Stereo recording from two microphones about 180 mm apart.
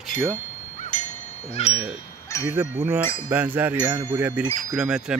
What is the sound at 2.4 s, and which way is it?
A man's voice, 10° right (ahead or behind).